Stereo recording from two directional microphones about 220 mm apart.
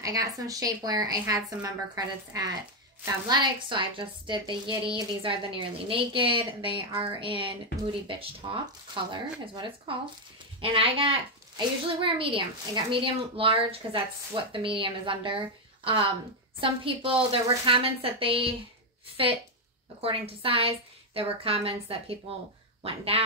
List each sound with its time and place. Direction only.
0.0 s a woman's voice: 15° right (ahead or behind)